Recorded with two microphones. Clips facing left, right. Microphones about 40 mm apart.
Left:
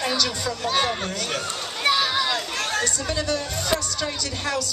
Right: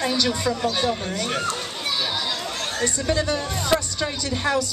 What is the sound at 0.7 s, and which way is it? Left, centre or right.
Speech, left.